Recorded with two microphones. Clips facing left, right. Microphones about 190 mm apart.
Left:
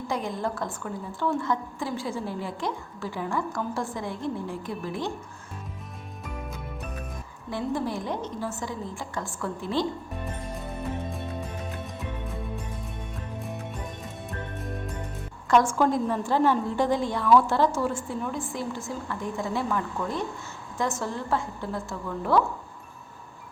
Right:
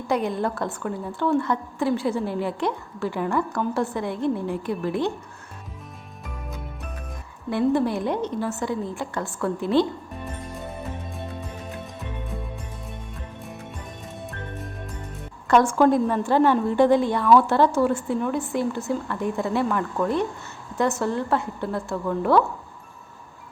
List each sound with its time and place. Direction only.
0.1 s a woman's voice: 65° right (ahead or behind)
7.5 s a woman's voice: 65° right (ahead or behind)
15.4 s a woman's voice: 60° right (ahead or behind)